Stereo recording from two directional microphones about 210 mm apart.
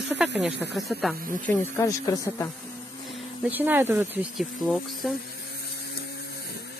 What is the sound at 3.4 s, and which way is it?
Speech, 10° right (ahead or behind).